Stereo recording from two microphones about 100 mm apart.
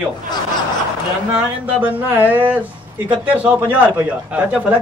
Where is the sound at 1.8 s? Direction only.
15° right (ahead or behind).